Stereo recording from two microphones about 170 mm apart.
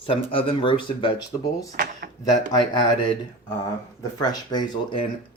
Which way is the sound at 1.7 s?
65° right (ahead or behind).